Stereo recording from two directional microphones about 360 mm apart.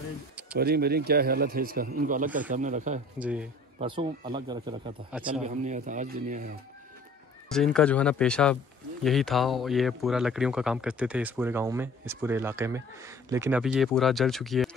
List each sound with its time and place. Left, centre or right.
0.6 s a man's voice: right
3.2 s a man's voice: centre; by 6.6 s right
7.5 s speech: centre